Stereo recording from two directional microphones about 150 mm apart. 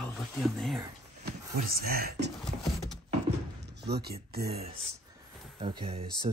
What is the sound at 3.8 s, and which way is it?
Speech, 90° right.